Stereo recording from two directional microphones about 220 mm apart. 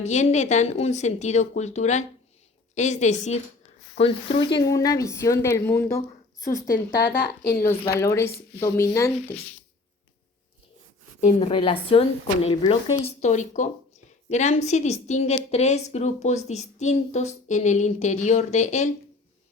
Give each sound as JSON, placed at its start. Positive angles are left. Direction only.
{"t": 0.0, "sound": "a woman's voice", "side_deg": 30}
{"t": 6.4, "sound": "speech", "side_deg": 40}
{"t": 7.7, "sound": "speech", "side_deg": 15}
{"t": 11.3, "sound": "a woman's voice", "side_deg": 25}